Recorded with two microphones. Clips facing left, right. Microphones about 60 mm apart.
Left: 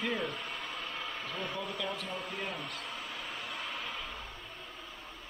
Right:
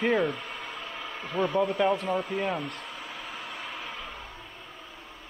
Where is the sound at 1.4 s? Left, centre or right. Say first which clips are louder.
Right 15 dB; right.